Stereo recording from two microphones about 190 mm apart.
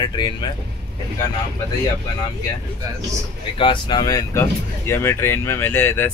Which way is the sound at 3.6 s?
25° left (ahead or behind).